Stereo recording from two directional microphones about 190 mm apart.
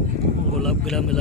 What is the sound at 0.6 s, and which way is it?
Speech, centre (ahead or behind).